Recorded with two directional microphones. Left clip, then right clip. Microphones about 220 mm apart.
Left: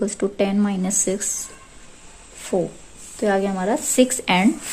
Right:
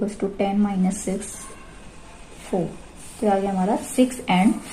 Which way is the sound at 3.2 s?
55° left (ahead or behind).